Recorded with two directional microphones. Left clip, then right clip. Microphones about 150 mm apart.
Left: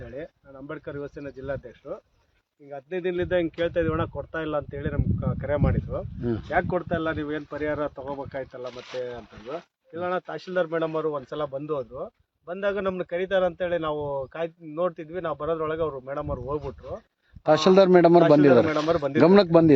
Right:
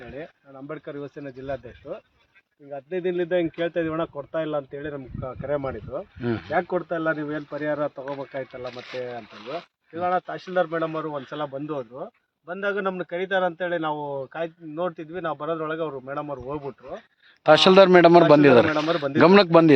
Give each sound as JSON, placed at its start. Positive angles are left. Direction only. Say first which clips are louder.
{"t": 0.2, "sound": "speech", "louder": "even", "side_deg": 25}
{"t": 2.7, "sound": "speech", "louder": "right 2 dB", "side_deg": 0}
{"t": 6.2, "sound": "speech", "louder": "right 1 dB", "side_deg": 10}
{"t": 8.6, "sound": "speech", "louder": "right 1 dB", "side_deg": 5}
{"t": 9.9, "sound": "a man's voice", "louder": "right 4 dB", "side_deg": 50}
{"t": 17.4, "sound": "speech", "louder": "right 4 dB", "side_deg": 10}